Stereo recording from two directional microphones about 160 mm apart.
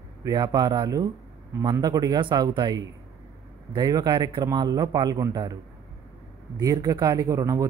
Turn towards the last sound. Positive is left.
turn(degrees=-20)  # may be behind; listen again after turning